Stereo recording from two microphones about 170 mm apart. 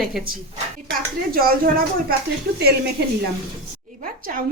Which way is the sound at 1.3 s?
60° right (ahead or behind).